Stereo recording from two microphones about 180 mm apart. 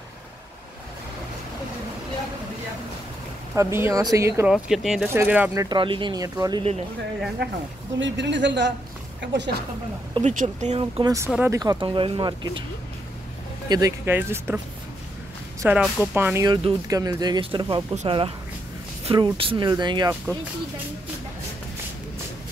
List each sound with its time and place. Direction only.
3.5 s speech: 15° right (ahead or behind)
4.6 s speech: centre (ahead or behind); by 6.6 s 20° right (ahead or behind)
7.4 s a woman's voice: 70° right (ahead or behind)
8.0 s a woman's voice: 80° right
10.1 s speech: 40° right (ahead or behind)
11.4 s speech: 20° right (ahead or behind)
13.7 s speech: 20° right (ahead or behind)
15.6 s speech: 5° right (ahead or behind)
16.4 s speech: 20° right (ahead or behind)